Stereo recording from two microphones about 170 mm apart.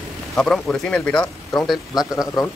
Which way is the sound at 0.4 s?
5° left (ahead or behind).